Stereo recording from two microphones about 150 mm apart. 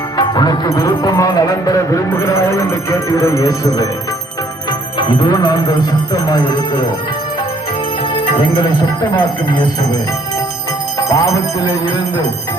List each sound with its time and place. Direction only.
0.2 s music: 25° left (ahead or behind)
4.9 s music: 30° left (ahead or behind)
8.2 s speech: 35° left (ahead or behind)
11.1 s music: 20° left (ahead or behind)